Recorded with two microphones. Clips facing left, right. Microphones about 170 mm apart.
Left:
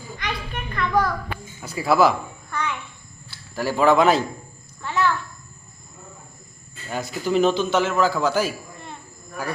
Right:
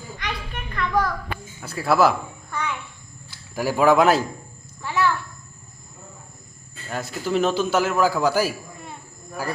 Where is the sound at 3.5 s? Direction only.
10° right (ahead or behind).